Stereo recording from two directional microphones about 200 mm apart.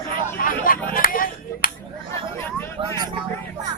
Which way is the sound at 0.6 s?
45° left (ahead or behind).